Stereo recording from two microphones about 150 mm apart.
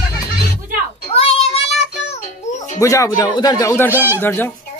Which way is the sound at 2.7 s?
20° left (ahead or behind).